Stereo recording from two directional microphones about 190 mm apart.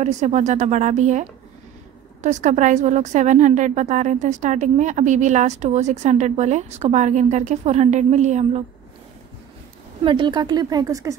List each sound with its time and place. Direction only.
0.0 s a woman's voice: 40° right (ahead or behind)
2.2 s a woman's voice: 40° right (ahead or behind)
10.0 s speech: 25° right (ahead or behind)